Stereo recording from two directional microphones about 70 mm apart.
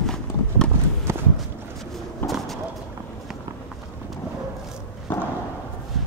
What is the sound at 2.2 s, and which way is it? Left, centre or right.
Bird, centre.